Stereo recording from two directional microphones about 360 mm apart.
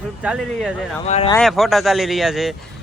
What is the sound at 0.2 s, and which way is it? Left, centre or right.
Speech, centre.